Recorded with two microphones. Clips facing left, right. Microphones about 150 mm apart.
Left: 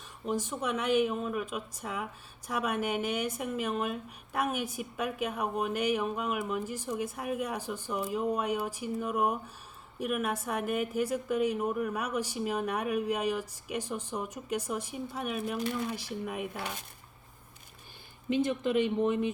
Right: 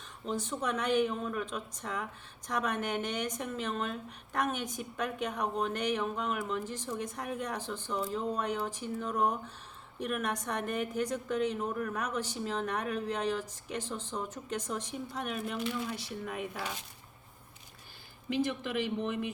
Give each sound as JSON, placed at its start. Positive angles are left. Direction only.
{"t": 0.3, "sound": "a woman's voice", "side_deg": 10}
{"t": 18.6, "sound": "speech", "side_deg": 25}